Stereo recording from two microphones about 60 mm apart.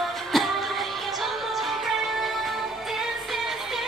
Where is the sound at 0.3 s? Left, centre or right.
Centre.